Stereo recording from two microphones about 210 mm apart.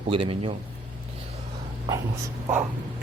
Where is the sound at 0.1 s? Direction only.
25° right (ahead or behind).